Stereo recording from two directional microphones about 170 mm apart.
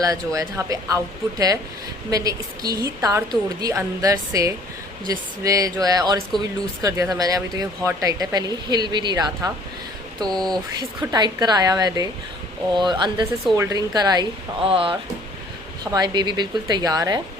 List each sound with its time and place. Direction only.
0.0 s speech: 20° right (ahead or behind)
10.2 s speech: 5° left (ahead or behind)
10.5 s speech: 20° right (ahead or behind)